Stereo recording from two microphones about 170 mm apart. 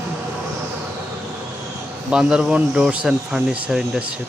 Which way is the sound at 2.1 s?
5° right (ahead or behind).